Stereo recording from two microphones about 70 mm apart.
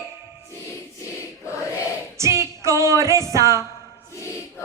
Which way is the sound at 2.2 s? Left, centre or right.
Right.